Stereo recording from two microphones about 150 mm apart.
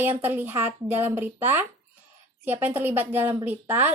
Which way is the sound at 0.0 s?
15° right (ahead or behind).